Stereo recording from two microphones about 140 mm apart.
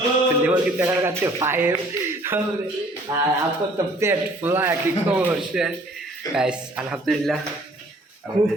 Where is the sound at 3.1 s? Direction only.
30° right (ahead or behind).